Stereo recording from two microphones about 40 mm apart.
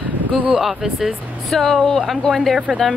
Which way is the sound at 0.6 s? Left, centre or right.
Centre.